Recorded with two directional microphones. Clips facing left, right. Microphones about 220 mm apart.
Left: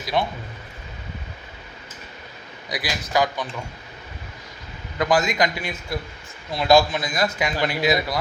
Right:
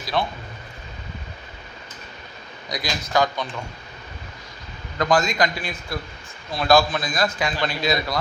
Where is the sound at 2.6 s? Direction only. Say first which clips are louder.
Even; 5° left (ahead or behind).